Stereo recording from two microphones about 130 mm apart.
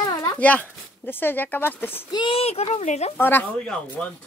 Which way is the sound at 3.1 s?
15° left (ahead or behind).